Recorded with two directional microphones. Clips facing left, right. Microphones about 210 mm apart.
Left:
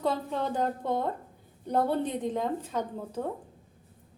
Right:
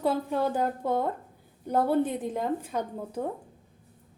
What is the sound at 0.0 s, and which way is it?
A woman's voice, 10° right (ahead or behind).